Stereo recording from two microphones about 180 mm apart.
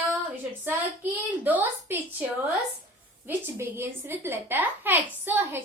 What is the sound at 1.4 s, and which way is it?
Speech, 10° right (ahead or behind).